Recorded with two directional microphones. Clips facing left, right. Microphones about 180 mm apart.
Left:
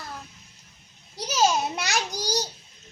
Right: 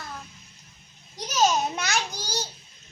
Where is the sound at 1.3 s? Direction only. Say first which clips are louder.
Even; 10° left (ahead or behind).